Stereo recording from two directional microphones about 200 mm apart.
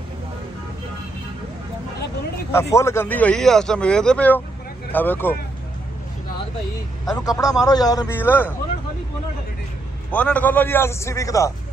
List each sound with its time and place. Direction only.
2.7 s a man's voice: 15° left (ahead or behind)
7.2 s a man's voice: 20° left (ahead or behind)
10.1 s a man's voice: 5° left (ahead or behind)